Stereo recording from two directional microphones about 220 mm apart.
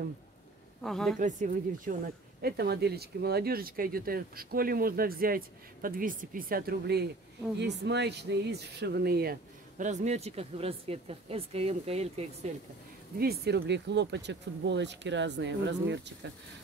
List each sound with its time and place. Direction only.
0.8 s a woman's voice: centre (ahead or behind)
1.2 s speech: 35° right (ahead or behind)
2.4 s speech: 45° right (ahead or behind); by 12.3 s 30° right (ahead or behind)
13.2 s speech: 45° right (ahead or behind)